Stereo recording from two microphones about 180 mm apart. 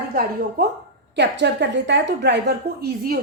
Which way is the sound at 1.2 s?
75° right (ahead or behind).